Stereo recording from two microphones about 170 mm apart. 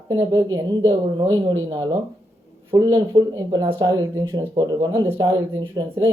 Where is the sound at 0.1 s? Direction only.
25° right (ahead or behind).